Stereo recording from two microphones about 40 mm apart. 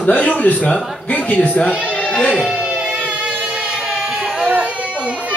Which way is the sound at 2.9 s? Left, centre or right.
Right.